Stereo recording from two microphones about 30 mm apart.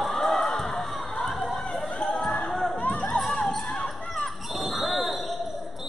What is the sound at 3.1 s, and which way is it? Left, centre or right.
Basketball bounce, centre.